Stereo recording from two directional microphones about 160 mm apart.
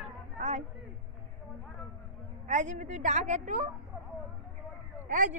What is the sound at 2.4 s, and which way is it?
A woman's voice, 50° right (ahead or behind).